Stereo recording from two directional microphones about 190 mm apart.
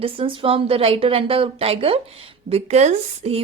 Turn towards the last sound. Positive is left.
turn(degrees=-35)  # may be behind; listen again after turning